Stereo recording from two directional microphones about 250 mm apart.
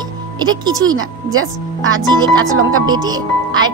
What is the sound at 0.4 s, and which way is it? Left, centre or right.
Speech, centre.